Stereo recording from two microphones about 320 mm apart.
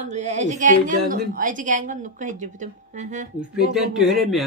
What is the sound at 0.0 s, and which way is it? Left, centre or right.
A woman's voice, right.